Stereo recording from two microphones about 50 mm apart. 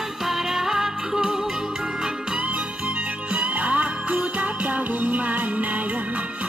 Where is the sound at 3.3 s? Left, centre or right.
Right.